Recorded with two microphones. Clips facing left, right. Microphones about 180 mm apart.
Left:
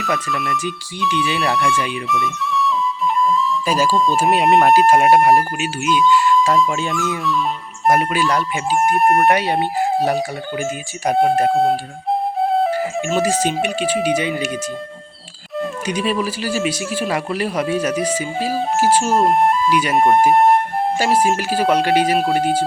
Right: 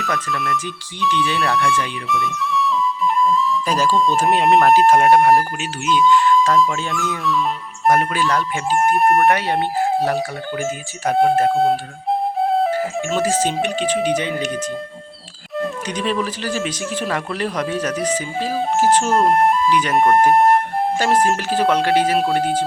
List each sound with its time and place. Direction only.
0.0 s speech: centre (ahead or behind)
2.0 s flute: centre (ahead or behind)
4.2 s speech: 5° left (ahead or behind)
4.6 s speech: 15° left (ahead or behind)
9.0 s speech: centre (ahead or behind)
9.2 s speech: 15° left (ahead or behind)
11.5 s speech: centre (ahead or behind)
12.4 s flute: centre (ahead or behind)
12.7 s speech: 10° left (ahead or behind)
19.7 s speech: 10° left (ahead or behind)